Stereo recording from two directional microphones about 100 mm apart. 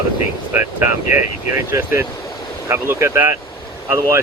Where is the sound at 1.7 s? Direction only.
25° right (ahead or behind).